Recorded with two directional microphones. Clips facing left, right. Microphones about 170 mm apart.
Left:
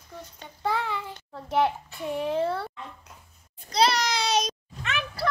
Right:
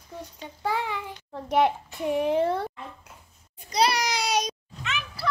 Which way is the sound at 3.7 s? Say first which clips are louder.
Left 1 dB; 10° right (ahead or behind).